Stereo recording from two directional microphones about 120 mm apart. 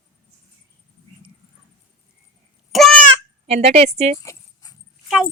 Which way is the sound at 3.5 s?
60° right (ahead or behind).